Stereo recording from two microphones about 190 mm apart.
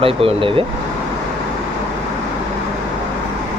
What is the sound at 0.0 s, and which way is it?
Speech, 30° right (ahead or behind).